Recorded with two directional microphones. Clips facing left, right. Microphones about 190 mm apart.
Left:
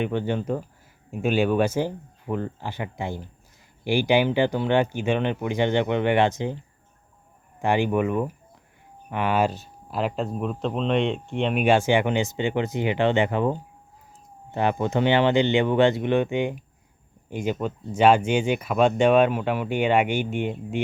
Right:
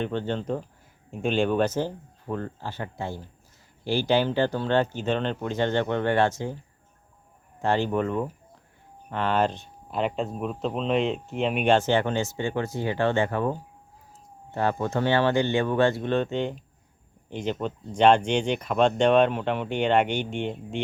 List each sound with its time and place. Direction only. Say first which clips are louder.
0.0 s speech: left 3 dB; 10° left (ahead or behind)